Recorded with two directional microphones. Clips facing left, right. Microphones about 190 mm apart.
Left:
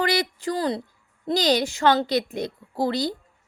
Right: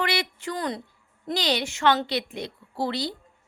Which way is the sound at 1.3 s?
40° left (ahead or behind).